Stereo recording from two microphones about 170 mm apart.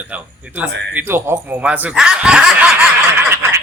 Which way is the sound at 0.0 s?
10° right (ahead or behind).